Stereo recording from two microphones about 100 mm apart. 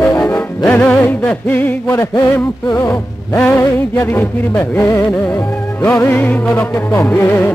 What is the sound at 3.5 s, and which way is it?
Music, 25° left (ahead or behind).